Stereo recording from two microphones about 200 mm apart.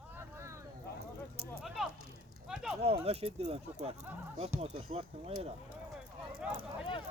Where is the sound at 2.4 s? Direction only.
5° right (ahead or behind).